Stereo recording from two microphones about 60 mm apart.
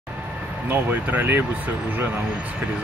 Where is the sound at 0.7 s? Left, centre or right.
Right.